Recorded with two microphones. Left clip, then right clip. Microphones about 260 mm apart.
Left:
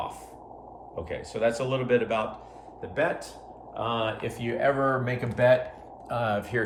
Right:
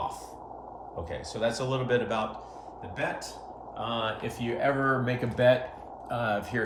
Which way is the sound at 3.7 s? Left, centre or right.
Centre.